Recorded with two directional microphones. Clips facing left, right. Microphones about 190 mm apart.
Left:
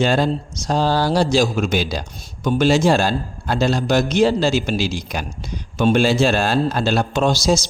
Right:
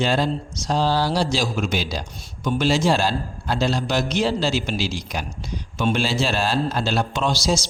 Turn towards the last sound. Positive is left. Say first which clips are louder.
# left 5 dB
turn(degrees=50)  # may be behind; listen again after turning